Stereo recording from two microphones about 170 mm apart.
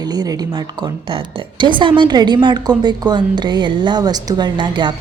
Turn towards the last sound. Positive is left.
turn(degrees=-25)  # may be behind; listen again after turning